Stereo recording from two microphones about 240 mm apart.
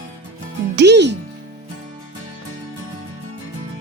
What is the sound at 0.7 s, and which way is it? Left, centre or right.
Speech, right.